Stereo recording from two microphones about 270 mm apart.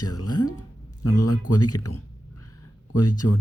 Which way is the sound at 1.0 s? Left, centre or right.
Left.